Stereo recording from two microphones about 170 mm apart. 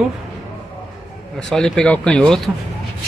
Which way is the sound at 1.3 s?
Centre (ahead or behind).